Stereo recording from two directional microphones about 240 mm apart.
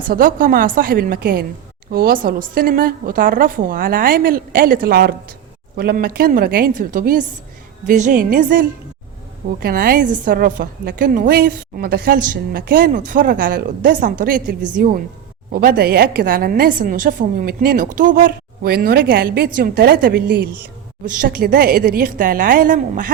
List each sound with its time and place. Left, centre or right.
0.1 s a woman's voice: right